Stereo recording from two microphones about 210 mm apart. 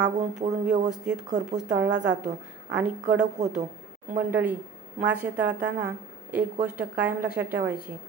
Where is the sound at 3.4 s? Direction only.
35° right (ahead or behind).